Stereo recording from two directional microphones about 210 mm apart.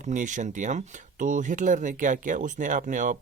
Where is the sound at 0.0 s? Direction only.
35° right (ahead or behind).